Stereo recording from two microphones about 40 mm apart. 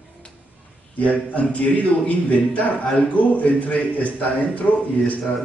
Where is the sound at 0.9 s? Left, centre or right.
Left.